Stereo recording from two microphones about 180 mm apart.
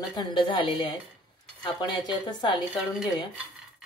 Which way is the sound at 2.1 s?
25° left (ahead or behind).